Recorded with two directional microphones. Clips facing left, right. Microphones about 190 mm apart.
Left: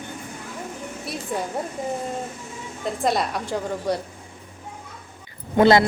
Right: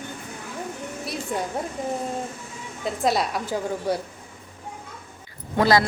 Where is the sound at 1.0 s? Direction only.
Centre (ahead or behind).